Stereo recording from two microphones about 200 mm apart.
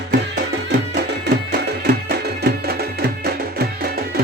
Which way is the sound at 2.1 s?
50° right (ahead or behind).